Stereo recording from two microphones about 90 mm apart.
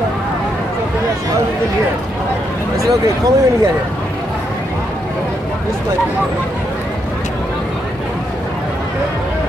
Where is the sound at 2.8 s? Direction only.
40° right (ahead or behind).